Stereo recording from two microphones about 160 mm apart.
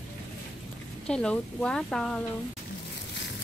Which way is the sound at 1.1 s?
5° left (ahead or behind).